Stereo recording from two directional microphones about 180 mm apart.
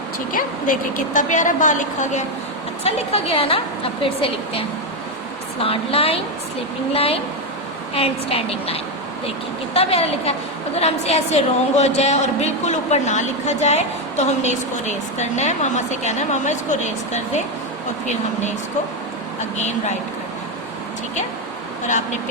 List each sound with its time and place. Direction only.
0.3 s a woman's voice: 50° left (ahead or behind)
19.4 s a woman's voice: 40° left (ahead or behind)